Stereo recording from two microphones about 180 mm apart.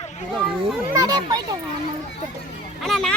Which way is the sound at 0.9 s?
20° right (ahead or behind).